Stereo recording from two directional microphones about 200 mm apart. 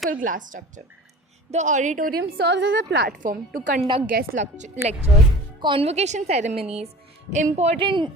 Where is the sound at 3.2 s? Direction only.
40° right (ahead or behind).